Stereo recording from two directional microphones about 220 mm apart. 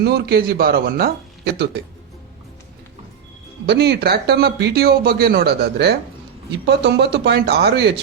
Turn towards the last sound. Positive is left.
turn(degrees=-50)  # may be behind; listen again after turning